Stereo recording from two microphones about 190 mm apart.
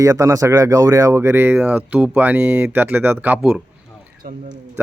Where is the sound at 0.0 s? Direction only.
15° right (ahead or behind).